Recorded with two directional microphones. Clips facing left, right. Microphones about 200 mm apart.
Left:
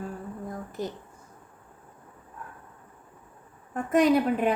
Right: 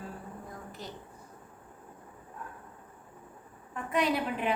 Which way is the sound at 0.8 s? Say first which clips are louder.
Left 12 dB; 45° left (ahead or behind).